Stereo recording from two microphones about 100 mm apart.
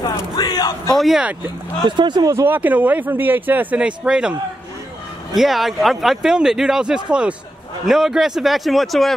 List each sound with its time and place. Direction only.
0.0 s a sound: 45° left (ahead or behind)
0.9 s speech: centre (ahead or behind)
1.9 s speech: 50° right (ahead or behind)
2.4 s speech: 20° right (ahead or behind); by 9.1 s centre (ahead or behind)